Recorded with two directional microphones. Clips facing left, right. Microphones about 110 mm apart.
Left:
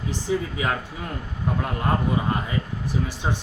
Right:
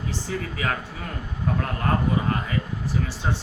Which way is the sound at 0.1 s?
15° left (ahead or behind).